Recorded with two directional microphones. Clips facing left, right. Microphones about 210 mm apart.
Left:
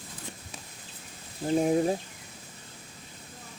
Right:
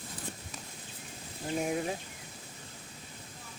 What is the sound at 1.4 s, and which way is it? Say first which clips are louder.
Speech: left 8 dB; 35° left (ahead or behind).